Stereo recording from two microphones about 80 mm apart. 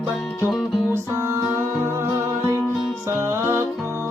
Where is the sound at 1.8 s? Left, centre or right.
Right.